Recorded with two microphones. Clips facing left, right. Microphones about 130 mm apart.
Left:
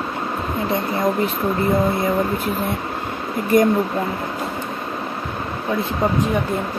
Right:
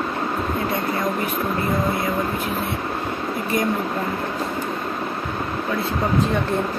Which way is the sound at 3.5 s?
50° left (ahead or behind).